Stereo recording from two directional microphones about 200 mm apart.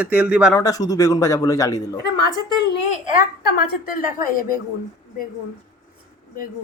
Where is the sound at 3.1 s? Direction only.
45° left (ahead or behind).